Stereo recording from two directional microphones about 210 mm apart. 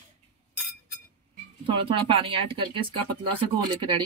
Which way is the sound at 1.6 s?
25° right (ahead or behind).